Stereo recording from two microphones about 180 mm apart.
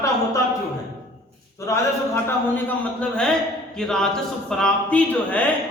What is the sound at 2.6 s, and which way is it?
A man's voice, 5° left (ahead or behind).